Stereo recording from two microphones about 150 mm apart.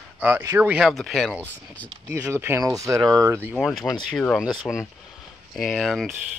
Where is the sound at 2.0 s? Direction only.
15° right (ahead or behind).